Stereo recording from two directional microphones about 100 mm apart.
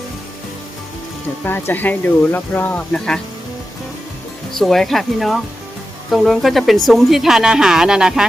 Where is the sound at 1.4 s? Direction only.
20° left (ahead or behind).